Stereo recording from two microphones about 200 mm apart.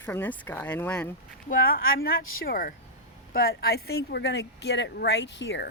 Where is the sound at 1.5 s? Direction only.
45° left (ahead or behind).